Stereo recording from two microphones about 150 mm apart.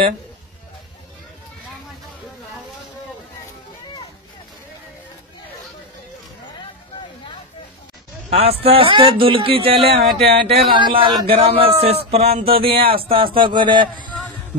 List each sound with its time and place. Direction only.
8.3 s a man's voice: 40° right (ahead or behind)